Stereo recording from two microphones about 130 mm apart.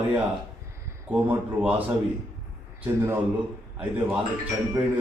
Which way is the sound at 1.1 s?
15° right (ahead or behind).